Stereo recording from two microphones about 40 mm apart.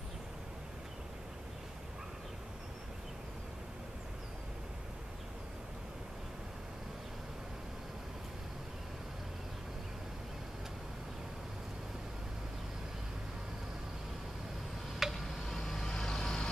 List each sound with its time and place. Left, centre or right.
15.0 s tick-tock: centre
15.5 s vehicle: centre